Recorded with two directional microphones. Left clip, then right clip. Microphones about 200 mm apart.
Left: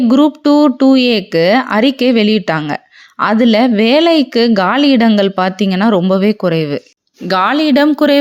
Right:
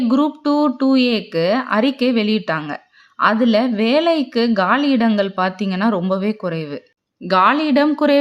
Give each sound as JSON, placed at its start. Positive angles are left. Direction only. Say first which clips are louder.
{"t": 0.1, "sound": "speech", "louder": "left 8 dB", "side_deg": 30}
{"t": 7.3, "sound": "speech", "louder": "left 2 dB", "side_deg": 25}